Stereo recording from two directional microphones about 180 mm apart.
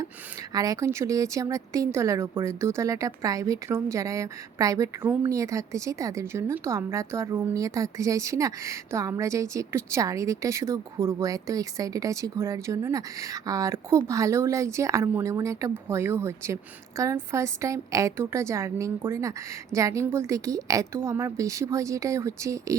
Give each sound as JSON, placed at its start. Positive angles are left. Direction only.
{"t": 0.5, "sound": "speech", "side_deg": -20}